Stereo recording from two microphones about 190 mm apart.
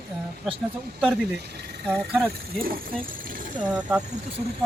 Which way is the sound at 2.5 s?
50° right (ahead or behind).